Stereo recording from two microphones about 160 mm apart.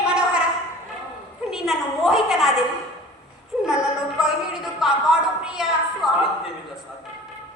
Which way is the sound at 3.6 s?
5° right (ahead or behind).